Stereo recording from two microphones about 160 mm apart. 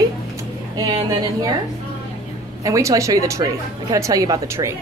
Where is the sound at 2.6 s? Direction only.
20° right (ahead or behind).